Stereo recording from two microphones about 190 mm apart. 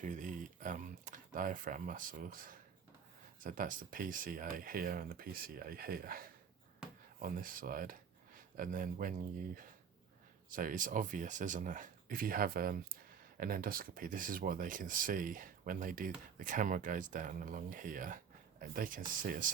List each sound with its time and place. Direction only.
0.0 s speech: 40° right (ahead or behind)
10.5 s speech: 45° right (ahead or behind)